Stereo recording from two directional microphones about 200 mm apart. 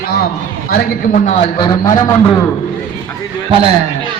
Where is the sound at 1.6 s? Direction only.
20° left (ahead or behind).